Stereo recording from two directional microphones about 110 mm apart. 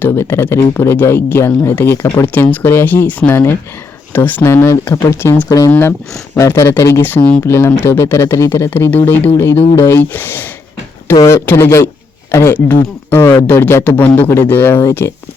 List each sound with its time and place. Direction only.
0.0 s speech: 20° left (ahead or behind)